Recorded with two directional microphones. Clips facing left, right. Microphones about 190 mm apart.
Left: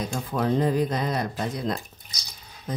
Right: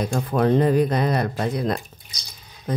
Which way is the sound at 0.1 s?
60° right (ahead or behind).